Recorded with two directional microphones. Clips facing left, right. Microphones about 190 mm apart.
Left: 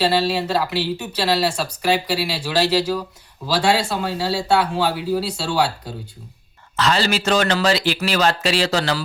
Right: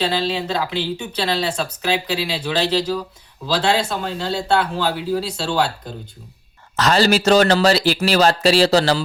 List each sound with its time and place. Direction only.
0.0 s speech: 5° left (ahead or behind)
6.7 s speech: 40° right (ahead or behind)